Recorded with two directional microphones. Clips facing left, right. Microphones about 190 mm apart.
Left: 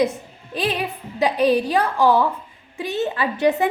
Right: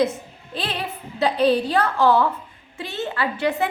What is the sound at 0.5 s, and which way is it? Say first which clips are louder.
A woman's voice: left 5 dB; 15° left (ahead or behind).